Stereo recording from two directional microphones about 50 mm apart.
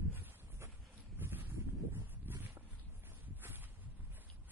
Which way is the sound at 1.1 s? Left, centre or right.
Right.